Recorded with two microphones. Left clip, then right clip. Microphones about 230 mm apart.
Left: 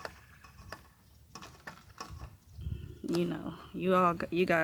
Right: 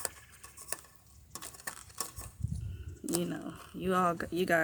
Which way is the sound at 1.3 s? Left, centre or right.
Centre.